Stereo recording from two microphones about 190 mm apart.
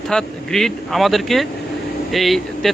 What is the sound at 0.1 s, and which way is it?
Speech, centre (ahead or behind).